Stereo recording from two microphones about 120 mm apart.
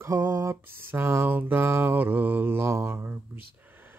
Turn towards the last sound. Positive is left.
turn(degrees=-20)  # may be behind; listen again after turning